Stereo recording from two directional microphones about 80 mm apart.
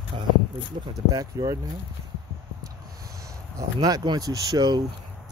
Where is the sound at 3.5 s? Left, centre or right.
Right.